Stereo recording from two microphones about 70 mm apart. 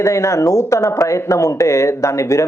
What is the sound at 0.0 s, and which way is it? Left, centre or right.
Speech, left.